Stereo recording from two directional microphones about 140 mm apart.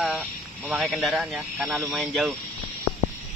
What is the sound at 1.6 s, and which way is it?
Speech, 15° right (ahead or behind).